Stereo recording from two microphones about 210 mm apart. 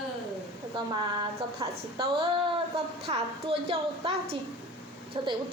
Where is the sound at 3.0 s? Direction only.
30° right (ahead or behind).